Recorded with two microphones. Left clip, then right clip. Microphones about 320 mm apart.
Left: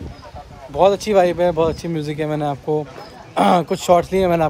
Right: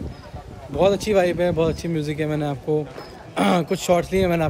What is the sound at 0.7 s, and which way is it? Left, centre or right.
A man's voice, centre.